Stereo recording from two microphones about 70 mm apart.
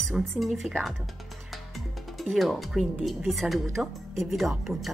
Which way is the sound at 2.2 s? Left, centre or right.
Centre.